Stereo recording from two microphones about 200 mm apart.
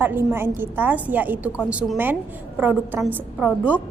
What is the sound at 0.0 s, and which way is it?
A woman's voice, 10° right (ahead or behind).